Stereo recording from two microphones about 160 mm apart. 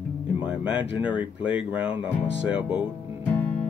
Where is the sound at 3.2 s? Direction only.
10° left (ahead or behind).